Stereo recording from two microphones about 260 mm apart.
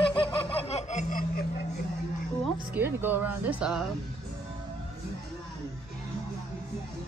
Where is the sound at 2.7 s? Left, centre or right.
Centre.